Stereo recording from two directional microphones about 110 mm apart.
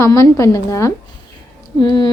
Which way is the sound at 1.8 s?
45° left (ahead or behind).